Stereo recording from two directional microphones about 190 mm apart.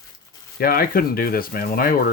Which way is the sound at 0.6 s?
50° left (ahead or behind).